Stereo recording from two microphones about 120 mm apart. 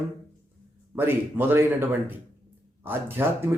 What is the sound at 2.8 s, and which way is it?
Speech, 20° right (ahead or behind).